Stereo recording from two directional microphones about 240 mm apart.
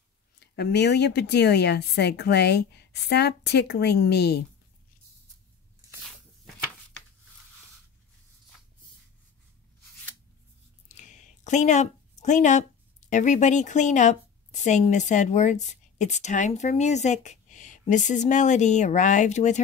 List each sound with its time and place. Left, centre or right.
0.4 s speech: left
10.9 s a sound: left
13.1 s a woman's voice: left